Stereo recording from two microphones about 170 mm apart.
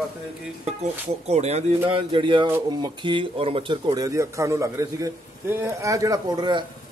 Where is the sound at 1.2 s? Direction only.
40° right (ahead or behind).